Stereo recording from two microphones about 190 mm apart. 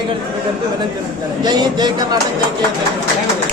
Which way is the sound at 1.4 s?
25° right (ahead or behind).